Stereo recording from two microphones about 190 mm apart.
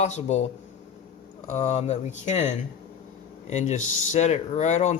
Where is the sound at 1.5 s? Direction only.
35° left (ahead or behind).